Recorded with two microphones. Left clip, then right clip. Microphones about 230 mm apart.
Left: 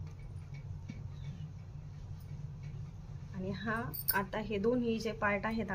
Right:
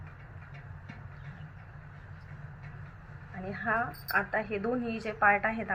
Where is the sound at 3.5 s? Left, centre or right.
Left.